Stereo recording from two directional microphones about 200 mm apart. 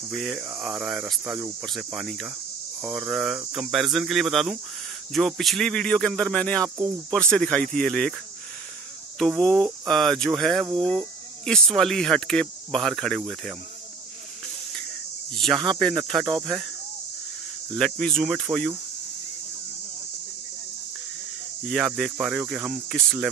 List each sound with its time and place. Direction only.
0.1 s speech: 5° right (ahead or behind)
9.4 s speech: 5° left (ahead or behind)
15.3 s speech: centre (ahead or behind)
16.3 s speech: 20° right (ahead or behind)
17.7 s speech: centre (ahead or behind)
21.6 s speech: centre (ahead or behind)